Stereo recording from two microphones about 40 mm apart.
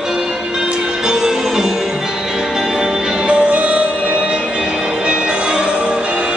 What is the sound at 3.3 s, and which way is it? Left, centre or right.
Music, right.